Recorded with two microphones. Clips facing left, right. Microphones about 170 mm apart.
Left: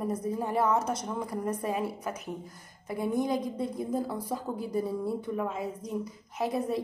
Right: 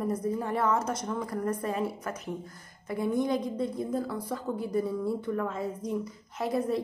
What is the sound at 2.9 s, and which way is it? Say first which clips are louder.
A woman's voice: right 1 dB; 25° left (ahead or behind).